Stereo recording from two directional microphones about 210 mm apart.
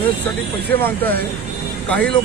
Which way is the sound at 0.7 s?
10° left (ahead or behind).